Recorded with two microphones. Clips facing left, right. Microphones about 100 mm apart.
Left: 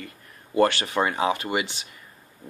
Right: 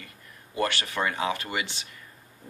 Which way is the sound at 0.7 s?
25° left (ahead or behind).